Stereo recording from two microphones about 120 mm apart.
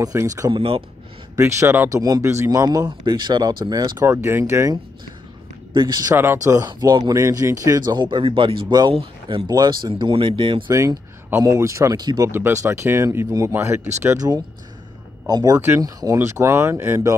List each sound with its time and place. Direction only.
0.0 s speech: 25° right (ahead or behind)
0.5 s speech: 50° right (ahead or behind)
1.3 s speech: 25° right (ahead or behind)
4.0 s speech: 20° right (ahead or behind)
5.7 s speech: 40° right (ahead or behind)
6.1 s speech: 25° right (ahead or behind); by 10.6 s 45° right (ahead or behind)
11.2 s speech: 20° right (ahead or behind)
12.3 s speech: 20° right (ahead or behind)